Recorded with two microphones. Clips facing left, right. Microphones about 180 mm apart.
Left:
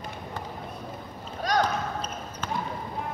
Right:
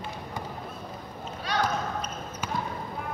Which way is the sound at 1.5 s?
40° left (ahead or behind).